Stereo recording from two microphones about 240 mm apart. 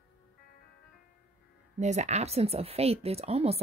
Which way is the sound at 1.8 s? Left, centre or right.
Right.